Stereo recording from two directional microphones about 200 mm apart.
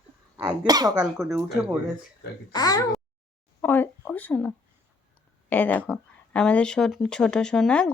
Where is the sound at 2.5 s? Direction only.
20° left (ahead or behind).